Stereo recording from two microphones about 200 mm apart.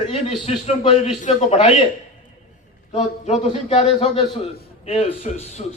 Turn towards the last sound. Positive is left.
turn(degrees=35)  # may be behind; listen again after turning